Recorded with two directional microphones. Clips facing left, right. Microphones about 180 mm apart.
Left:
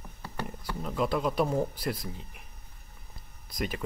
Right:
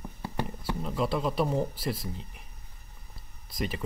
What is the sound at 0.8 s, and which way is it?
Speech, centre (ahead or behind).